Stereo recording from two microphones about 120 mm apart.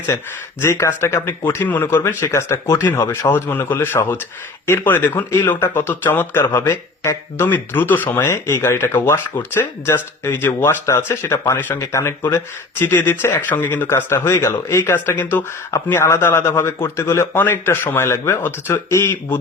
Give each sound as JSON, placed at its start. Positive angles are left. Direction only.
{"t": 0.6, "sound": "speech", "side_deg": 25}